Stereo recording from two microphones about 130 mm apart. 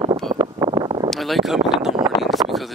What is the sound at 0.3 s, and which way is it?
Wind, 35° right (ahead or behind).